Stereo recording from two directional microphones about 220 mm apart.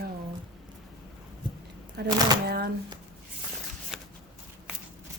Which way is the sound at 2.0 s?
45° right (ahead or behind).